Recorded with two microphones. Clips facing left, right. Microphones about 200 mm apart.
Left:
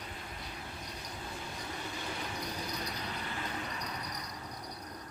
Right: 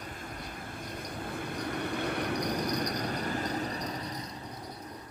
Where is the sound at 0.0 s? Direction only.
45° right (ahead or behind).